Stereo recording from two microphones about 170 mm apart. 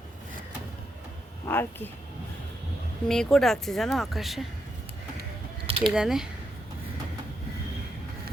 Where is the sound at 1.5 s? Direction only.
10° left (ahead or behind).